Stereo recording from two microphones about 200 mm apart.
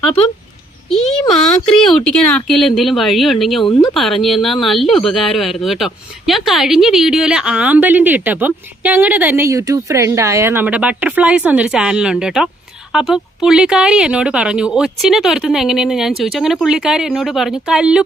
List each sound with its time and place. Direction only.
1.4 s speech: 5° left (ahead or behind)
3.7 s speech: 20° left (ahead or behind)
3.9 s speech: centre (ahead or behind)